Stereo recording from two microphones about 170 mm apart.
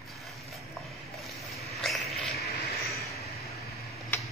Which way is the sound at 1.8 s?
Centre (ahead or behind).